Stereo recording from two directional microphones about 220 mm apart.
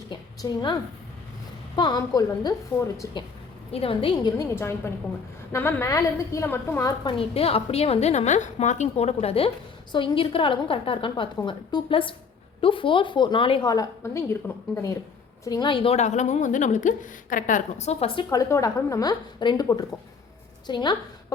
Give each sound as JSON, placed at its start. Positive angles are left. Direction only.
{"t": 0.1, "sound": "a sound", "side_deg": 20}
{"t": 1.7, "sound": "a woman's voice", "side_deg": 20}
{"t": 3.7, "sound": "a woman's voice", "side_deg": 25}